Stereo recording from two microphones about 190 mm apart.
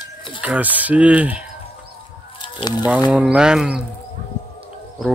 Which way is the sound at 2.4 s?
25° left (ahead or behind).